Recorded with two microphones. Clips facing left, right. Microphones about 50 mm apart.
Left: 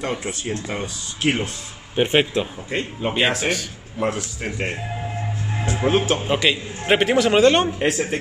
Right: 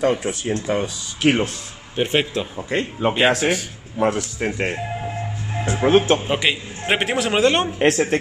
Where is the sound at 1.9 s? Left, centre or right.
Centre.